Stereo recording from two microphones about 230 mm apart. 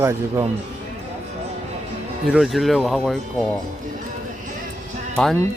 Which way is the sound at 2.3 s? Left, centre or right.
Centre.